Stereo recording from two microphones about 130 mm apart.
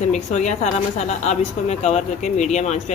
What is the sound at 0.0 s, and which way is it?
A woman's voice, 65° left (ahead or behind).